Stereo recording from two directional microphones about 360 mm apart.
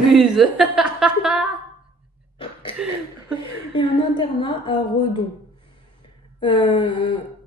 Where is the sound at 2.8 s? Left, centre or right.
Centre.